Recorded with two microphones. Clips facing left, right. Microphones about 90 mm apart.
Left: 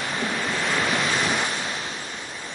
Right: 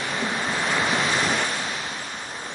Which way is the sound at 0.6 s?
5° right (ahead or behind).